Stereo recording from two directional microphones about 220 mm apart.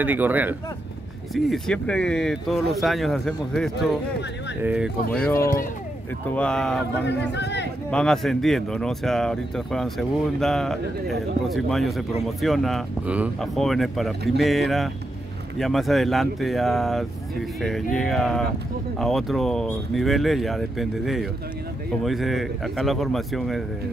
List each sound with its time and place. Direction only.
0.0 s speech: 10° right (ahead or behind)
5.1 s speech: 10° left (ahead or behind)
7.1 s a man's voice: 50° left (ahead or behind)
7.9 s speech: 5° left (ahead or behind)